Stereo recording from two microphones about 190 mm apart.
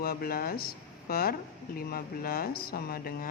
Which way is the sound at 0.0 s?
55° left (ahead or behind).